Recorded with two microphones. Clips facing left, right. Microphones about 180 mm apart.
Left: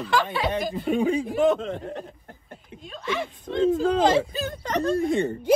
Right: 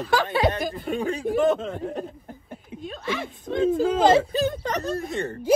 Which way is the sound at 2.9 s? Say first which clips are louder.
Left 1 dB; 50° right (ahead or behind).